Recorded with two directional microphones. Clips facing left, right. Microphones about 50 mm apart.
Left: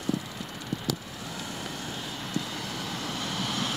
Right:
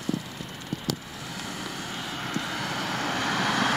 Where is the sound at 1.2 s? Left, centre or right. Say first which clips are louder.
Right 2 dB; right.